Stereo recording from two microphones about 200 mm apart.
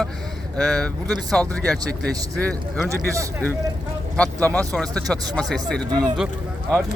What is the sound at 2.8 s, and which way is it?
Speech, 15° right (ahead or behind).